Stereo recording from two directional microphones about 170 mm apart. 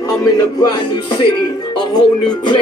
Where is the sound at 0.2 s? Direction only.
25° left (ahead or behind).